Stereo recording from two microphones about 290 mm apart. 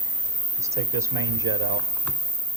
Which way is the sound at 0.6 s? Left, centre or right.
Centre.